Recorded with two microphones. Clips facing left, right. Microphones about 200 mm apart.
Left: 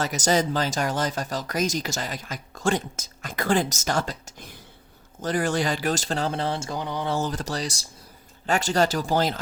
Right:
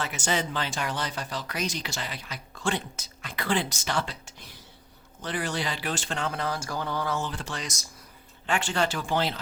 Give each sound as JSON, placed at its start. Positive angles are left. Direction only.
{"t": 0.0, "sound": "speech", "side_deg": 40}
{"t": 7.1, "sound": "speech", "side_deg": 40}